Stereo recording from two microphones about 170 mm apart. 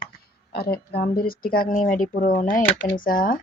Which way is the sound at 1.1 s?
60° left (ahead or behind).